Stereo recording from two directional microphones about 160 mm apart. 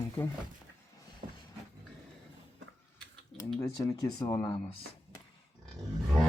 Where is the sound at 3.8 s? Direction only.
25° left (ahead or behind).